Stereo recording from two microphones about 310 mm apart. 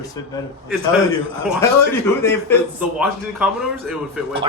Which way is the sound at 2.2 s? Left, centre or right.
Centre.